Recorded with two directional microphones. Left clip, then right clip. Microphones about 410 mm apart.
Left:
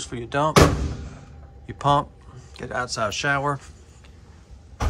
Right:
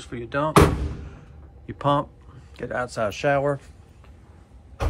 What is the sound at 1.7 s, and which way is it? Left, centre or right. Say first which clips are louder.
Speech: left 2 dB; centre.